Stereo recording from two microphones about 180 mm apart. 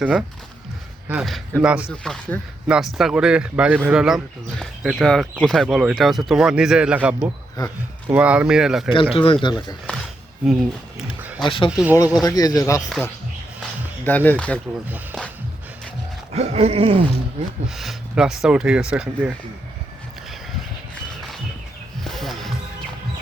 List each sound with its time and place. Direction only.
0.0 s speech: 5° right (ahead or behind)
1.9 s speech: 5° left (ahead or behind)
7.6 s speech: 20° left (ahead or behind)
8.1 s speech: 5° right (ahead or behind)
8.9 s speech: 30° left (ahead or behind)
10.4 s speech: 5° right (ahead or behind)
11.4 s speech: 30° left (ahead or behind)
11.7 s speech: 5° right (ahead or behind)
12.2 s speech: 20° left (ahead or behind)
14.0 s speech: 10° left (ahead or behind)
16.3 s a sound: 35° right (ahead or behind)
17.7 s speech: centre (ahead or behind)
22.0 s a sound: centre (ahead or behind)